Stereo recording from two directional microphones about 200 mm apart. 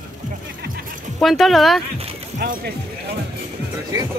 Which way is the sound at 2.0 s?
30° right (ahead or behind).